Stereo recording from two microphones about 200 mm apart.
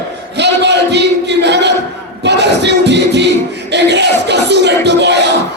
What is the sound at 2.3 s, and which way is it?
Music, 60° right (ahead or behind).